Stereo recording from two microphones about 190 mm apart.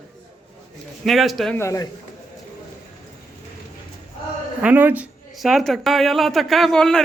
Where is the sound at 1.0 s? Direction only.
Centre (ahead or behind).